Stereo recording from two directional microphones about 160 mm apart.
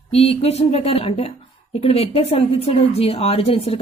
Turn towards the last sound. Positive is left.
turn(degrees=35)  # may be behind; listen again after turning